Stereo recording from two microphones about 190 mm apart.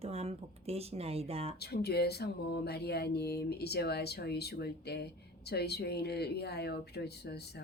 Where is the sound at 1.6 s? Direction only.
55° left (ahead or behind).